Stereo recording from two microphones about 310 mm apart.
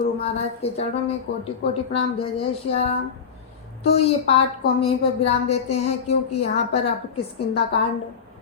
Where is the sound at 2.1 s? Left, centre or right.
Centre.